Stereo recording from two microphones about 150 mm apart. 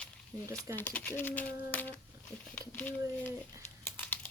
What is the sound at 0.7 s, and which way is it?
Speech, 10° left (ahead or behind).